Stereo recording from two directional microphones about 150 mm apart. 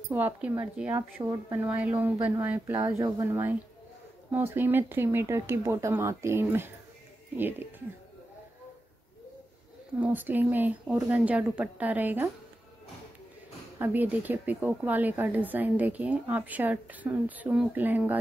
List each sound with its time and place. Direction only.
0.1 s speech: 10° right (ahead or behind)
2.7 s speech: 25° right (ahead or behind)
9.9 s speech: 10° right (ahead or behind)
13.7 s speech: 15° right (ahead or behind)